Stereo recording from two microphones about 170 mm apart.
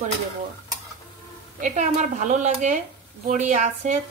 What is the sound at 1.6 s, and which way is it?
A woman's voice, 45° right (ahead or behind).